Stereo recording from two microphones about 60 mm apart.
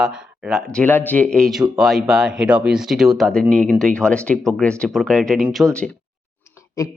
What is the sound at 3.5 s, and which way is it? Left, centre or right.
Speech, centre.